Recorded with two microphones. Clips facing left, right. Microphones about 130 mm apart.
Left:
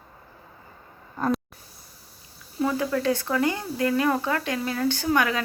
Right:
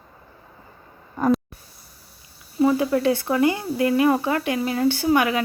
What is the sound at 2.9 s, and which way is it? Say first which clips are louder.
Speech: right 4 dB; 15° right (ahead or behind).